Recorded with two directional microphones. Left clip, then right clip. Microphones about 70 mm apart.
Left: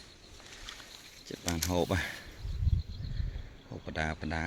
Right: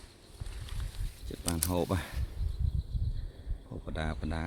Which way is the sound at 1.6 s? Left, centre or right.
Right.